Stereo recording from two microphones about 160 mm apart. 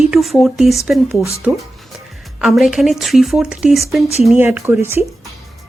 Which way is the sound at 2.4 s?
Centre (ahead or behind).